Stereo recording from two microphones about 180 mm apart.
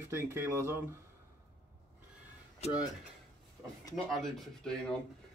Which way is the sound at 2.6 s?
35° left (ahead or behind).